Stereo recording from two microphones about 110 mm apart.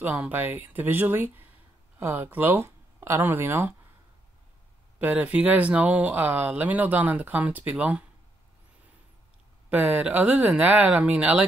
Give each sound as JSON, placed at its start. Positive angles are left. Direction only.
{"t": 0.0, "sound": "speech", "side_deg": -15}
{"t": 4.9, "sound": "speech", "side_deg": -15}
{"t": 9.7, "sound": "speech", "side_deg": -15}